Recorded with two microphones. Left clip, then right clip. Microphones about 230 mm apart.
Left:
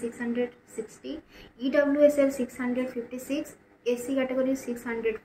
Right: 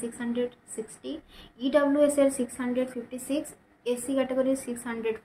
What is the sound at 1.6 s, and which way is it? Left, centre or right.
A woman's voice, centre.